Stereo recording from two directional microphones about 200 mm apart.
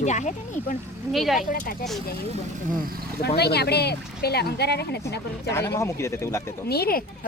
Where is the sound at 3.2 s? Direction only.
55° left (ahead or behind).